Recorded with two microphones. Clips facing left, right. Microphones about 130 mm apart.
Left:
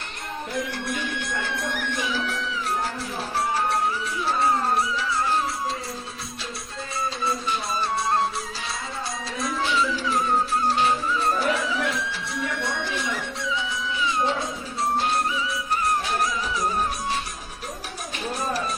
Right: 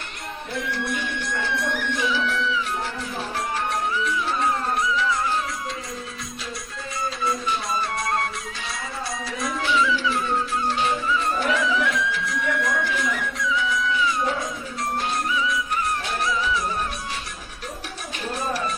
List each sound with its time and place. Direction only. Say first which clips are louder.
0.7 s music: right 2 dB; 50° left (ahead or behind)
7.3 s music: right 3 dB; 30° left (ahead or behind)
9.2 s music: even; centre (ahead or behind)
9.7 s music: right 3 dB; 40° left (ahead or behind)
15.3 s music: right 2 dB; 35° left (ahead or behind)
18.3 s music: right 1 dB; 40° left (ahead or behind)